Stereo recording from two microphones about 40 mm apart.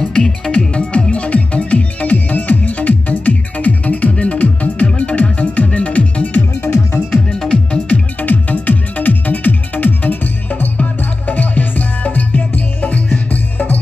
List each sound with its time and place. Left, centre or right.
0.1 s music: left
6.6 s music: left
7.2 s music: left
7.9 s music: left
13.3 s music: left